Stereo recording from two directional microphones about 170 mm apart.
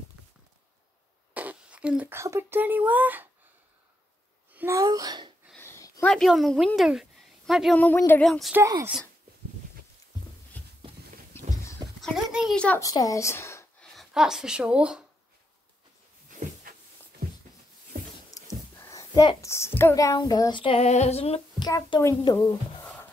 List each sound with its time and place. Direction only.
1.3 s speech: 10° right (ahead or behind)
4.6 s a child's voice: 20° right (ahead or behind)
5.6 s a sound: 15° left (ahead or behind)
6.0 s a woman's voice: centre (ahead or behind)
8.5 s speech: 15° right (ahead or behind)
10.6 s a sound: 10° left (ahead or behind)
12.0 s a sound: centre (ahead or behind)
12.5 s a child's voice: 10° left (ahead or behind)
12.8 s speech: 20° left (ahead or behind)
13.9 s speech: 5° right (ahead or behind)
18.4 s a sound: 20° left (ahead or behind)
18.8 s speech: 20° left (ahead or behind); by 21.4 s 40° left (ahead or behind)
21.5 s speech: 25° left (ahead or behind)